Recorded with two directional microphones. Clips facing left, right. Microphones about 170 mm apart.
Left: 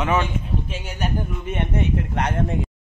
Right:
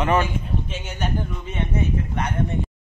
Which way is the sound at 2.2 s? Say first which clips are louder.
Left 2 dB; 85° left.